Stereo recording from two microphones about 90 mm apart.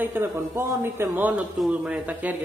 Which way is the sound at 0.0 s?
25° right (ahead or behind).